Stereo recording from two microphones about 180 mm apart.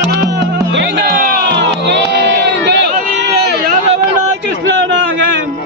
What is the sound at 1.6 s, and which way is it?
Crowd, 75° right (ahead or behind).